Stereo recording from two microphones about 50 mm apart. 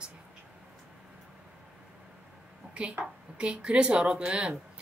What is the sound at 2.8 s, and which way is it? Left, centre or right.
A woman's voice, right.